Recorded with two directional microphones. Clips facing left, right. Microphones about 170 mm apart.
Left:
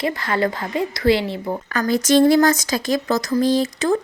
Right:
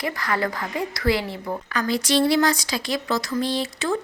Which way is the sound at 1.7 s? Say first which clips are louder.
Left 6 dB; 45° left (ahead or behind).